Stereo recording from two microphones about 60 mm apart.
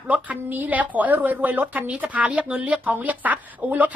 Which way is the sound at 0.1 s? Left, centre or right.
Right.